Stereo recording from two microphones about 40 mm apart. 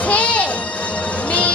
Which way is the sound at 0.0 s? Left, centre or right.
Left.